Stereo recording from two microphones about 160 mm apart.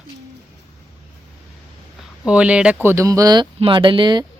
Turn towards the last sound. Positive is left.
turn(degrees=-30)  # may be behind; listen again after turning